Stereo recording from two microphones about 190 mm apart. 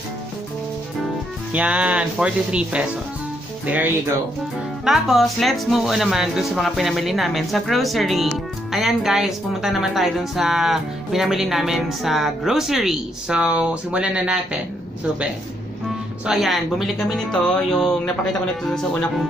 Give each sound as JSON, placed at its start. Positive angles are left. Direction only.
{"t": 1.5, "sound": "speech", "side_deg": -5}
{"t": 4.8, "sound": "speech", "side_deg": 0}
{"t": 16.3, "sound": "speech", "side_deg": 0}